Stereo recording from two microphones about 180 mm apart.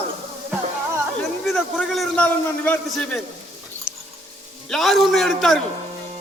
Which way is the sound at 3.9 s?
5° right (ahead or behind).